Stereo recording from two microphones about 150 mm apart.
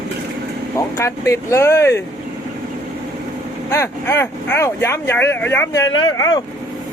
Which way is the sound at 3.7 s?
15° left (ahead or behind).